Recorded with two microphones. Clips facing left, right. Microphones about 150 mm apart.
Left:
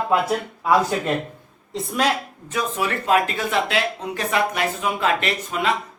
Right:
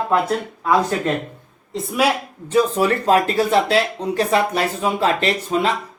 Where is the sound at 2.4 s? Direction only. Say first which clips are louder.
Right 8 dB; 30° right (ahead or behind).